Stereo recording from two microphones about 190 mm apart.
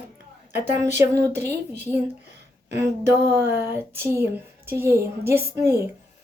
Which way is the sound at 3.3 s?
10° right (ahead or behind).